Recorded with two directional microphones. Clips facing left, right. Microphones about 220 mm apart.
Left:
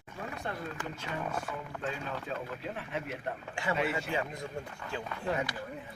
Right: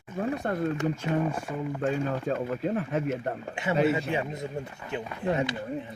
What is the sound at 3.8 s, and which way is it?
Speech, 25° right (ahead or behind).